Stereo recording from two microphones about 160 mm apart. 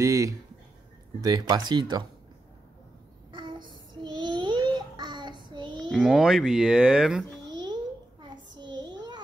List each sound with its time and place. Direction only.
0.0 s speech: 20° right (ahead or behind)
3.3 s child singing: 30° right (ahead or behind)
5.9 s a child's voice: centre (ahead or behind)
7.4 s babbling: 25° right (ahead or behind)
8.2 s child singing: 30° right (ahead or behind)